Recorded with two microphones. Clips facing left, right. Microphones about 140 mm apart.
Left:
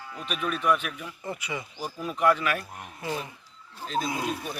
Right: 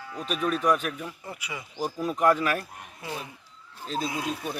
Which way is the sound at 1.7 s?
40° right (ahead or behind).